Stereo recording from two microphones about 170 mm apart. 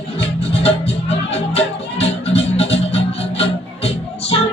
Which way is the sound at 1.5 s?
35° left (ahead or behind).